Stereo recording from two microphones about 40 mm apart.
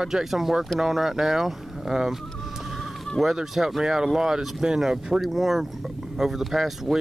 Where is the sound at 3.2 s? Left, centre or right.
Centre.